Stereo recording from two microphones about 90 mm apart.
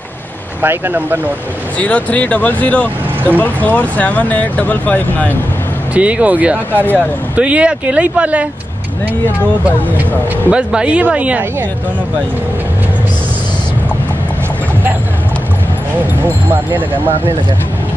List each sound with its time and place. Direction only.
0.6 s speech: 20° right (ahead or behind)
1.8 s speech: 15° left (ahead or behind)
5.9 s speech: 15° right (ahead or behind)
6.7 s speech: 20° left (ahead or behind)
7.3 s speech: 15° right (ahead or behind)
10.5 s speech: 10° right (ahead or behind)